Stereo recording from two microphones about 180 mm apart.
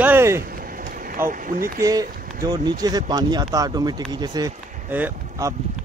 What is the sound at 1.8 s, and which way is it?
Speech, 20° right (ahead or behind).